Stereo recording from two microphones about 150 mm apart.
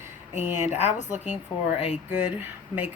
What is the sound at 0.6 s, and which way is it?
Speech, 45° left (ahead or behind).